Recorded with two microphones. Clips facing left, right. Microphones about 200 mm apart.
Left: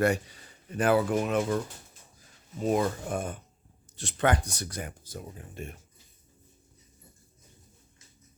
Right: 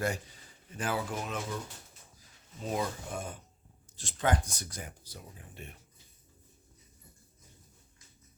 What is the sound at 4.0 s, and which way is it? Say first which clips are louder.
Speech: left 4 dB; 65° left (ahead or behind).